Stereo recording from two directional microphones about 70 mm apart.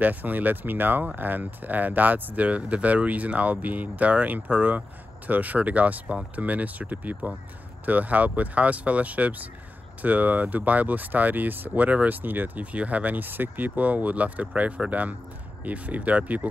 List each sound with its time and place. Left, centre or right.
0.0 s speech: right